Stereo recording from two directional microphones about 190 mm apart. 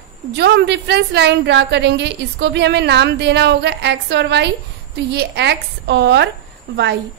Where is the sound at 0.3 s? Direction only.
60° right (ahead or behind).